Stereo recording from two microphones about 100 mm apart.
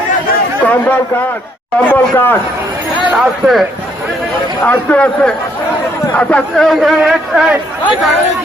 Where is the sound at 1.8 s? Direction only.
15° left (ahead or behind).